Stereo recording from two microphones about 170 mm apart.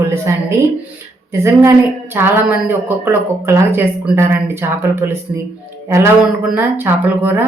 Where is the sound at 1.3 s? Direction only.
15° right (ahead or behind).